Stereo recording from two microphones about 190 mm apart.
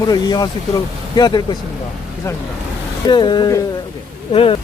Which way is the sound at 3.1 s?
25° left (ahead or behind).